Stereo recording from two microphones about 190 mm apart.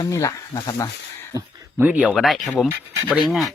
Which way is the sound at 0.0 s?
15° left (ahead or behind).